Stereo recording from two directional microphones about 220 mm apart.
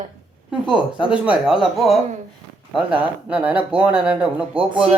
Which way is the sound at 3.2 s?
5° right (ahead or behind).